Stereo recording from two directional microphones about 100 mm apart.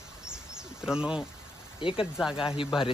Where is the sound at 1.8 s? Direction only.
60° left (ahead or behind).